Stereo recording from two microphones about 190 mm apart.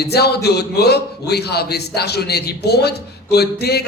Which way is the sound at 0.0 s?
60° left (ahead or behind).